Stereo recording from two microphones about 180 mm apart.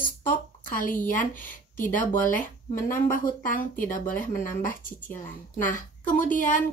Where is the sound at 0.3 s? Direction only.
50° left (ahead or behind).